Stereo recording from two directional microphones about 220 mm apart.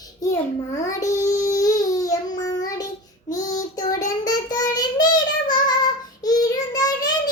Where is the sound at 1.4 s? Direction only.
15° left (ahead or behind).